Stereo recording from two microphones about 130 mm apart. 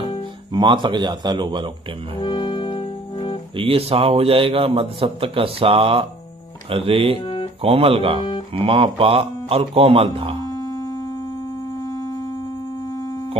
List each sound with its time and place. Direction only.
0.5 s speech: 35° right (ahead or behind)
2.1 s music: 35° left (ahead or behind)
3.5 s a man's voice: 45° right (ahead or behind)
7.2 s music: 40° left (ahead or behind)
7.6 s a man's voice: 50° right (ahead or behind)
10.5 s a sound: 30° left (ahead or behind)